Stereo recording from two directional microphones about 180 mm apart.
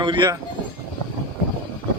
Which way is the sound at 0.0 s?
25° right (ahead or behind).